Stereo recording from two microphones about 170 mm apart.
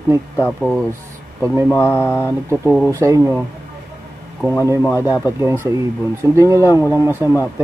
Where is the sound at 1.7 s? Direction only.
15° left (ahead or behind).